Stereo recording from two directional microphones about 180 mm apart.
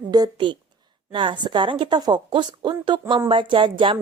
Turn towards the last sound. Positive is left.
turn(degrees=-25)  # may be behind; listen again after turning